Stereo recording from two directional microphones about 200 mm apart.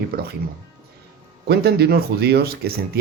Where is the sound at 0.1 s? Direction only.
50° right (ahead or behind).